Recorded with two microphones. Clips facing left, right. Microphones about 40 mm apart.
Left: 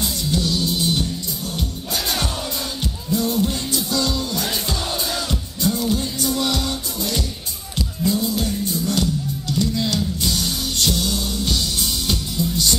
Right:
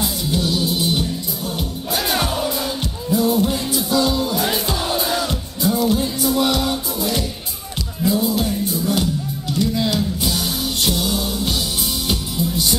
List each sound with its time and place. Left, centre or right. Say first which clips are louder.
0.0 s music: right 1 dB; centre